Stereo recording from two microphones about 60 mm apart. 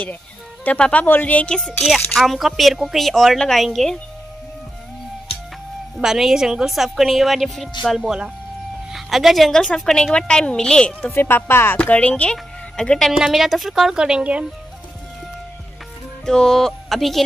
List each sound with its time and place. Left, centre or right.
0.7 s speech: centre
1.0 s a woman's voice: left
1.5 s speech: centre
2.1 s a woman's voice: centre
5.9 s a woman's voice: centre
8.0 s a woman's voice: centre
9.5 s speech: centre
10.1 s speech: centre
11.1 s speech: left
11.7 s speech: left
13.3 s a woman's voice: centre
16.3 s speech: centre